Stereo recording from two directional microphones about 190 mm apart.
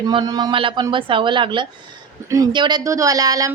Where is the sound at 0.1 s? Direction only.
25° right (ahead or behind).